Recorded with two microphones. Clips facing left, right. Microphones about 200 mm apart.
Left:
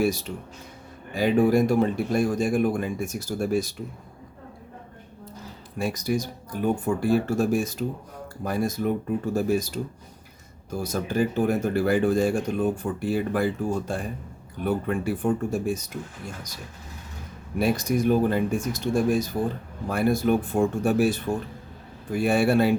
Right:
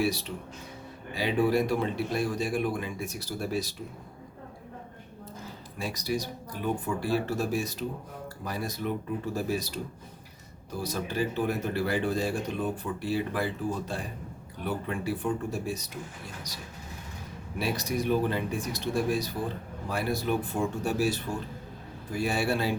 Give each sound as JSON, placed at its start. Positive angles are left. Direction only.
{"t": 0.0, "sound": "speech", "side_deg": 45}
{"t": 5.8, "sound": "speech", "side_deg": 50}
{"t": 17.6, "sound": "speech", "side_deg": 50}